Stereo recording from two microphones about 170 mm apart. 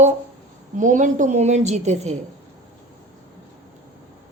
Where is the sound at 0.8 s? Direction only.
50° right (ahead or behind).